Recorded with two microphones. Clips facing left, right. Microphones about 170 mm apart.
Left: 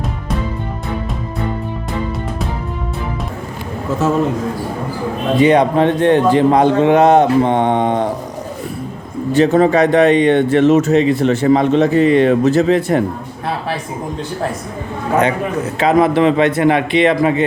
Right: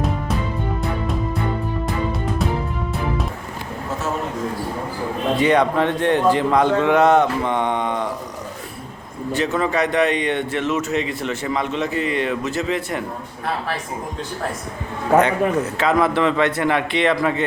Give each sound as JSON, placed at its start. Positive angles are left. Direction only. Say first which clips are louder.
{"t": 5.4, "sound": "speech", "louder": "left 6 dB", "side_deg": 20}
{"t": 9.3, "sound": "speech", "louder": "left 9 dB", "side_deg": 30}
{"t": 15.8, "sound": "speech", "louder": "left 7 dB", "side_deg": 20}